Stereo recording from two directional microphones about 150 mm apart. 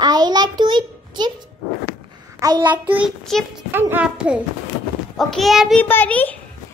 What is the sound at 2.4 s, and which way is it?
Child singing, 25° right (ahead or behind).